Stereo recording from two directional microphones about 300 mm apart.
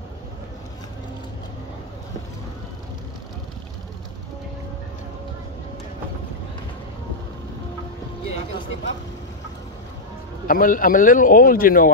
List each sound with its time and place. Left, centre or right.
10.4 s a man's voice: left